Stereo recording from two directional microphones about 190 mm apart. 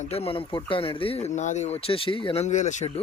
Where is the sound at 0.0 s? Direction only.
30° left (ahead or behind).